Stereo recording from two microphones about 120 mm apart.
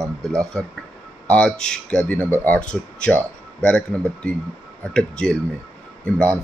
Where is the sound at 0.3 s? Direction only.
25° right (ahead or behind).